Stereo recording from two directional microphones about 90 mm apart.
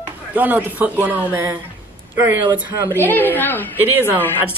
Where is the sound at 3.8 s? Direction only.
20° right (ahead or behind).